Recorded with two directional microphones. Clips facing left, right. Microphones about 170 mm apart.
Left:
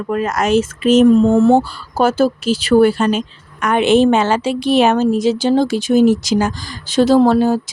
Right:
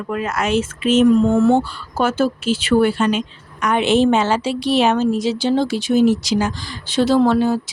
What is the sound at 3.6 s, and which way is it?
A woman's voice, 55° left (ahead or behind).